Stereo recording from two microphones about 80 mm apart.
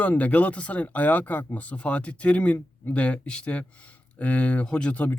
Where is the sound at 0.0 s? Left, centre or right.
Centre.